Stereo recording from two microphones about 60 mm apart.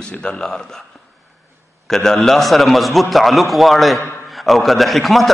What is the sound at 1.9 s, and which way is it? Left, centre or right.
A man's voice, centre.